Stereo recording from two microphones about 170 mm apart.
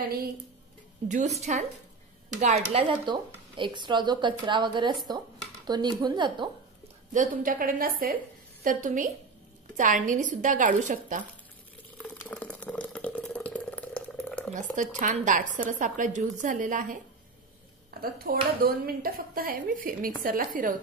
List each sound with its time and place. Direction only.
1.0 s speech: 45° right (ahead or behind); by 6.5 s 25° right (ahead or behind)
7.1 s a woman's voice: 50° right (ahead or behind)
12.0 s a sound: 10° left (ahead or behind)
14.5 s speech: 50° right (ahead or behind)
18.0 s a woman's voice: 60° right (ahead or behind)